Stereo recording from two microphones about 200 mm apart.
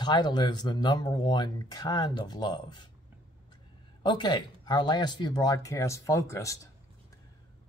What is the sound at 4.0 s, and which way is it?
Speech, 20° left (ahead or behind).